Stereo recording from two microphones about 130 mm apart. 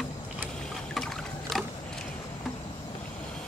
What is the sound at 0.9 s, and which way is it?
Boat, centre (ahead or behind).